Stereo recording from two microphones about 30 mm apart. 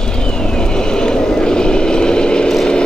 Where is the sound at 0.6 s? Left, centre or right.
Left.